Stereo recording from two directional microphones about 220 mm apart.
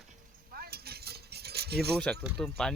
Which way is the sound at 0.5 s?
45° right (ahead or behind).